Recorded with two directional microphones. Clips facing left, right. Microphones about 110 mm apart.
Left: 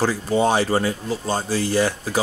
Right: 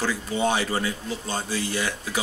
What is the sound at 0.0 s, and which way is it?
Speech, 35° left (ahead or behind).